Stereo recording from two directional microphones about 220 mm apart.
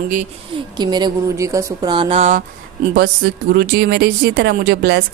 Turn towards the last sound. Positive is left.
turn(degrees=-45)  # may be behind; listen again after turning